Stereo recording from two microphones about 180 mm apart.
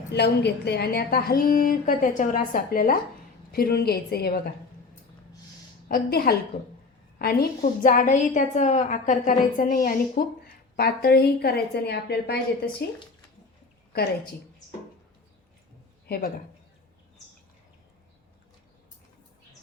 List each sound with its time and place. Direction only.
0.1 s a woman's voice: 70° left (ahead or behind)
5.9 s a woman's voice: 55° left (ahead or behind)
16.0 s speech: 60° left (ahead or behind)